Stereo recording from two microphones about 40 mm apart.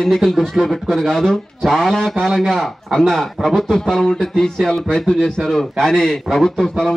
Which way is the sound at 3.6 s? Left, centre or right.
Centre.